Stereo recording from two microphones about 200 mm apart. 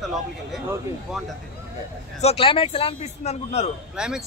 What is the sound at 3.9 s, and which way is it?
Speech, 5° right (ahead or behind).